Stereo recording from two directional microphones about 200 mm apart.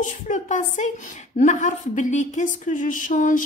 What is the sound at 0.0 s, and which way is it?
A woman's voice, 40° left (ahead or behind).